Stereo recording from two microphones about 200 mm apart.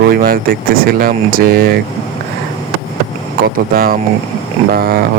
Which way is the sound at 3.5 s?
45° right (ahead or behind).